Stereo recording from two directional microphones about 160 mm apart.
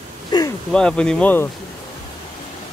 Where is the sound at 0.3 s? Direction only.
25° left (ahead or behind).